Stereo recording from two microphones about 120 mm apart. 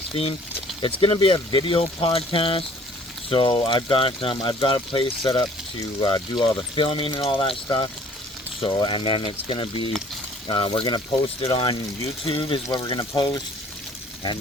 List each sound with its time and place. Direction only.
0.1 s speech: 55° left (ahead or behind); by 13.4 s 35° left (ahead or behind)